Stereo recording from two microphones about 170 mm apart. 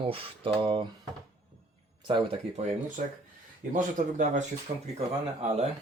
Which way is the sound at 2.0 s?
30° right (ahead or behind).